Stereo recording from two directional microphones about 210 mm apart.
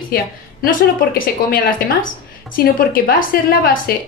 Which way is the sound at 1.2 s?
45° left (ahead or behind).